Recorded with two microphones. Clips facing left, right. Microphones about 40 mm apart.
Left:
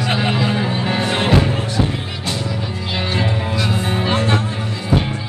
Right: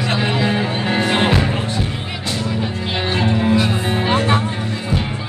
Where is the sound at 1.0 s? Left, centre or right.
Right.